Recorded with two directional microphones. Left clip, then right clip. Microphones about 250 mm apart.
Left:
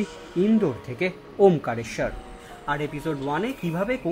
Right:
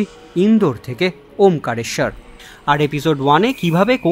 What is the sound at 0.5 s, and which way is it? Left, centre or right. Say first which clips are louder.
Speech: right 7 dB; centre.